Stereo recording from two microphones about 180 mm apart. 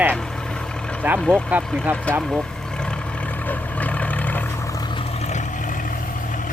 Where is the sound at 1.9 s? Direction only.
10° right (ahead or behind).